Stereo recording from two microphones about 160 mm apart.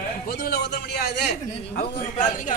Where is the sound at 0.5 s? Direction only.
90° left.